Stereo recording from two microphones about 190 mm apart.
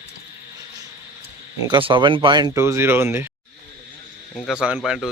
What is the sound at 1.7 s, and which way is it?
Speech, 25° right (ahead or behind).